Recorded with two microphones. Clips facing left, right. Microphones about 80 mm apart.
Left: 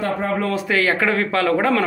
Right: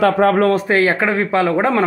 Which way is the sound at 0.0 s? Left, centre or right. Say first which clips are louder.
Right 9 dB; right.